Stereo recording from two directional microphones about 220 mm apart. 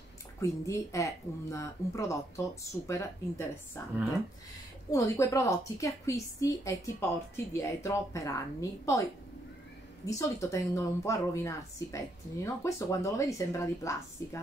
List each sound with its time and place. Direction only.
0.4 s a woman's voice: 15° left (ahead or behind)
4.9 s a woman's voice: 15° left (ahead or behind)
10.0 s a woman's voice: 15° left (ahead or behind)